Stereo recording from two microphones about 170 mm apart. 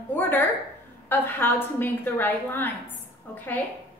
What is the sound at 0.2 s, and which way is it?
A woman's voice, 10° left (ahead or behind).